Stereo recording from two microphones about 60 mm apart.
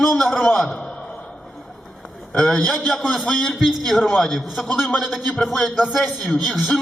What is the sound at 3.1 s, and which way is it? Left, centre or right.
A man's voice, centre.